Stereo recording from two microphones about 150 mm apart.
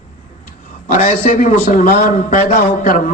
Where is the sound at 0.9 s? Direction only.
60° left (ahead or behind).